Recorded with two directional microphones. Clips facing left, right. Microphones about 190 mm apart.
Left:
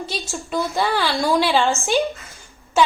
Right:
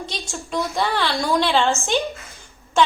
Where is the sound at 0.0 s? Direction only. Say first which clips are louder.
Left 3 dB; 5° left (ahead or behind).